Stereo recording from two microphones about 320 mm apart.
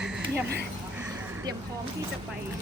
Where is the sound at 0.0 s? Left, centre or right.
Centre.